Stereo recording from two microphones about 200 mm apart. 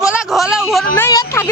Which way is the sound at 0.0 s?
Centre (ahead or behind).